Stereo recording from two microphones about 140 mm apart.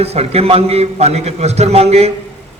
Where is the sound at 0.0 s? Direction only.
45° right (ahead or behind).